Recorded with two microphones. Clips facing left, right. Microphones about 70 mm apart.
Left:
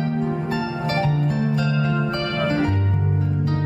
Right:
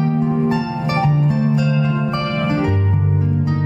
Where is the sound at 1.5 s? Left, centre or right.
Left.